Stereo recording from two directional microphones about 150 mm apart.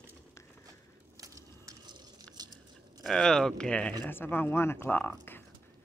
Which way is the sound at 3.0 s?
5° left (ahead or behind).